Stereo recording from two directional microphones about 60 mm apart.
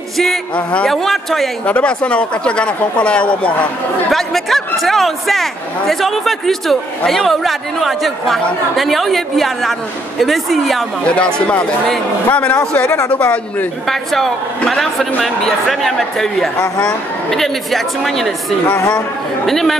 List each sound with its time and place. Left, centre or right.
0.6 s a man's voice: centre
0.8 s speech: centre
1.7 s speech: centre
4.1 s speech: centre
11.1 s a man's voice: centre
13.8 s speech: centre
19.4 s speech: centre